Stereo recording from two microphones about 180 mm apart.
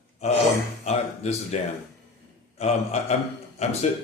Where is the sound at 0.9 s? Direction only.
40° left (ahead or behind).